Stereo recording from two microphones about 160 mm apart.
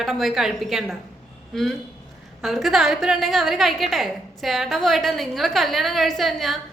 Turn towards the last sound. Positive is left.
turn(degrees=0)  # may be behind; listen again after turning